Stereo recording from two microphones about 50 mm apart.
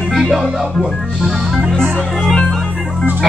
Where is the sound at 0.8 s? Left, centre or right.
Centre.